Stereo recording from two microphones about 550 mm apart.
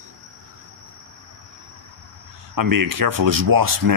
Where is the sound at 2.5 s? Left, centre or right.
Right.